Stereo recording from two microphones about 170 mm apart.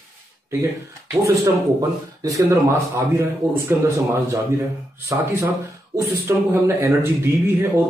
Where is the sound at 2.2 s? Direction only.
20° right (ahead or behind).